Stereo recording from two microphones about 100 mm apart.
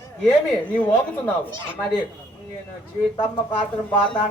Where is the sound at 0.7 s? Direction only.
15° left (ahead or behind).